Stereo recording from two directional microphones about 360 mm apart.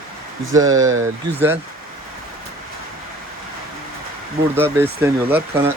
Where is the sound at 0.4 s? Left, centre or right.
Right.